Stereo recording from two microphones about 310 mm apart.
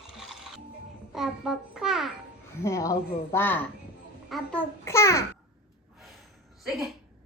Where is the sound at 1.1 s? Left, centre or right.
Centre.